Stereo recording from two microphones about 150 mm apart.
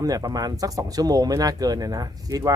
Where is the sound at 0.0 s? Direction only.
25° right (ahead or behind).